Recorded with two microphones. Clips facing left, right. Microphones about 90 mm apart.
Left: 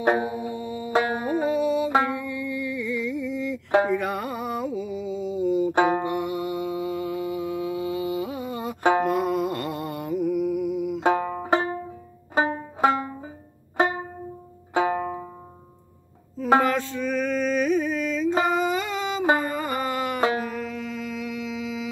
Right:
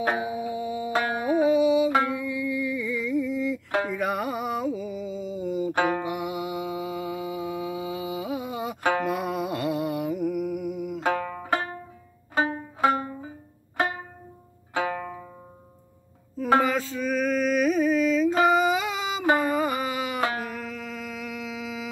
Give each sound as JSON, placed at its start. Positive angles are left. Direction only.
{"t": 0.3, "sound": "music", "side_deg": -5}
{"t": 5.7, "sound": "music", "side_deg": 25}
{"t": 6.0, "sound": "mantra", "side_deg": -5}
{"t": 9.0, "sound": "music", "side_deg": -5}
{"t": 11.0, "sound": "banjo", "side_deg": 25}
{"t": 13.7, "sound": "music", "side_deg": 25}
{"t": 14.7, "sound": "banjo", "side_deg": 25}
{"t": 16.6, "sound": "music", "side_deg": -5}
{"t": 18.4, "sound": "a sound", "side_deg": 0}
{"t": 19.4, "sound": "music", "side_deg": -5}
{"t": 20.4, "sound": "a sound", "side_deg": 0}